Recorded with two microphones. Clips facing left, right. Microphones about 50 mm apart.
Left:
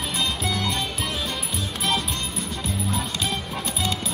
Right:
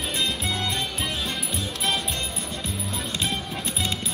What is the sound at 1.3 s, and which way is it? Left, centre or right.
Music, right.